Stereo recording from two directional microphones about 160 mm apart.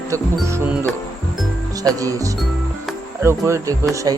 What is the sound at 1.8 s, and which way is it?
Speech, 20° right (ahead or behind).